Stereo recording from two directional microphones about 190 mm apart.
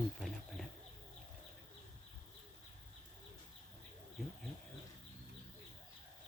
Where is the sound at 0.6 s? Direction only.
Centre (ahead or behind).